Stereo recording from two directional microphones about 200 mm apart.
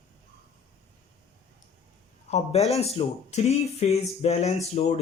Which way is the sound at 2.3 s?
30° left (ahead or behind).